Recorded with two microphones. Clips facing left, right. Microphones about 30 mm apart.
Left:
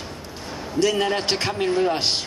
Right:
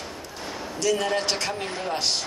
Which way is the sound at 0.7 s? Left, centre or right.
Left.